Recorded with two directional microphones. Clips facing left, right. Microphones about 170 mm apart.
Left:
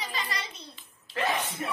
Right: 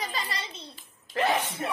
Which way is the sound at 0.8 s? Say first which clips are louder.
Right 4 dB; 40° right (ahead or behind).